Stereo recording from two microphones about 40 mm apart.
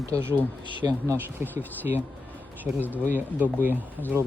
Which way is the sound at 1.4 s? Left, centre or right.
Right.